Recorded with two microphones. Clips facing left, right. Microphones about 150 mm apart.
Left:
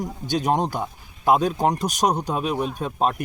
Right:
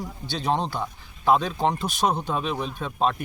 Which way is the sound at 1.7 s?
40° left (ahead or behind).